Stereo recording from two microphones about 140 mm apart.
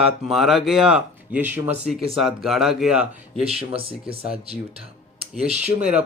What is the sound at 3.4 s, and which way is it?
Speech, 45° right (ahead or behind).